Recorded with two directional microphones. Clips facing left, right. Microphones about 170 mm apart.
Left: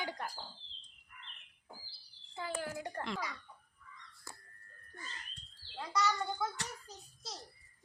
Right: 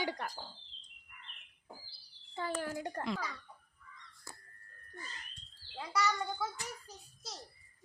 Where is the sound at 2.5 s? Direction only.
40° right (ahead or behind).